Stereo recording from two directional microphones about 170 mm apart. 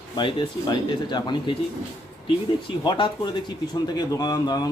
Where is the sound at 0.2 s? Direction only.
30° left (ahead or behind).